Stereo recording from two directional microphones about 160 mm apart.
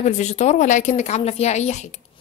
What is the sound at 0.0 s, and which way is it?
A woman's voice, 45° left (ahead or behind).